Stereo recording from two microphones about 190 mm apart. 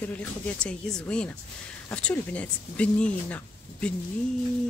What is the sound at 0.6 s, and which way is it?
Speech, 5° left (ahead or behind).